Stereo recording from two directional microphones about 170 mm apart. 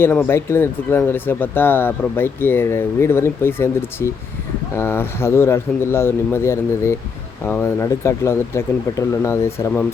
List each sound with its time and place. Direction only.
0.0 s speech: 10° left (ahead or behind)